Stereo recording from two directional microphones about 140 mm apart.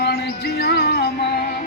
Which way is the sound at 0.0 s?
90° left.